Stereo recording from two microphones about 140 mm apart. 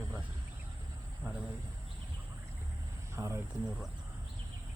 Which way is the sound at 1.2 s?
5° right (ahead or behind).